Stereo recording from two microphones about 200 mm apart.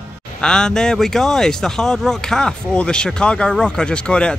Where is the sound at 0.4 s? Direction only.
5° left (ahead or behind).